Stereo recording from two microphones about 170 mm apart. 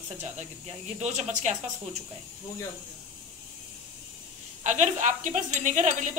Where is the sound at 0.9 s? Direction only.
45° right (ahead or behind).